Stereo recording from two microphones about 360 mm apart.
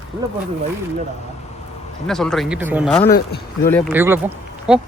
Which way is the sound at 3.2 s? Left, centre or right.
Left.